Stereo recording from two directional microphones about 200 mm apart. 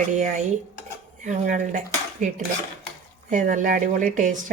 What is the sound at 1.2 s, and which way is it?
Speech, 40° right (ahead or behind).